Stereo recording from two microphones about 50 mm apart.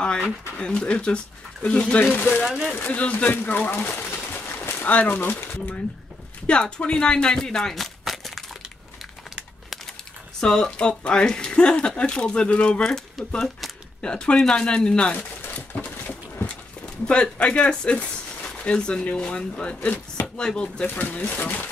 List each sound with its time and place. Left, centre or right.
0.0 s speech: centre
2.1 s speech: left
2.4 s speech: centre
2.7 s speech: left
4.5 s a sound: left
4.8 s speech: left
6.4 s speech: left; by 8.5 s centre
10.4 s speech: centre
12.8 s speech: centre
15.1 s a sound: left
17.0 s speech: left
20.9 s speech: left